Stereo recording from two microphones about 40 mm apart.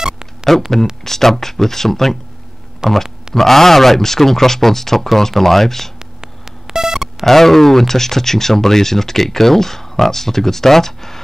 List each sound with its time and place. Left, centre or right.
0.0 s a sound: centre
0.5 s speech: centre
2.8 s speech: centre
3.3 s speech: centre
5.9 s a sound: centre
7.2 s speech: centre